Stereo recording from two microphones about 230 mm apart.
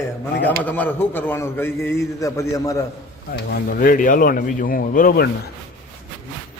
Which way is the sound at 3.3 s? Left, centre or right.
Left.